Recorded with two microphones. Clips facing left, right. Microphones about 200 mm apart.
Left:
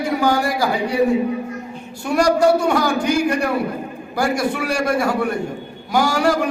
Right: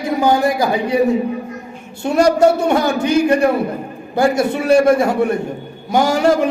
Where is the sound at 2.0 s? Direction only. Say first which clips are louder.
Right 3 dB; 25° right (ahead or behind).